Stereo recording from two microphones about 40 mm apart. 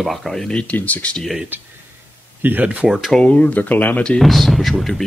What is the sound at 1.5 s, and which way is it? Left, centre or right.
Speech, right.